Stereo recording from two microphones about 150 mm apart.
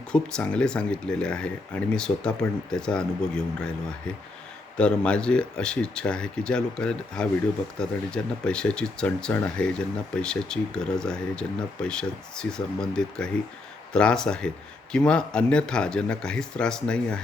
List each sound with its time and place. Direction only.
0.1 s speech: 5° left (ahead or behind)